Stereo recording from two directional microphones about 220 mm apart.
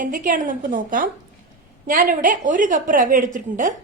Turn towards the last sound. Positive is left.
turn(degrees=-35)  # may be behind; listen again after turning